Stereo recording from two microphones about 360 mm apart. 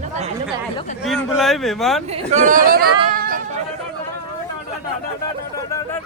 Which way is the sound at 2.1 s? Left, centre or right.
Centre.